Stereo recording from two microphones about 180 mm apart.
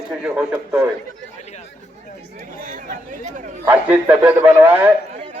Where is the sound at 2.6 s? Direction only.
45° right (ahead or behind).